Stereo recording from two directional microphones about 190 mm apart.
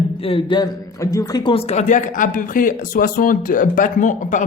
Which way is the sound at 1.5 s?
35° left (ahead or behind).